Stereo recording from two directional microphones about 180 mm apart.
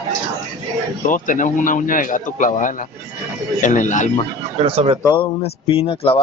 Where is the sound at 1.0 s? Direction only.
45° left (ahead or behind).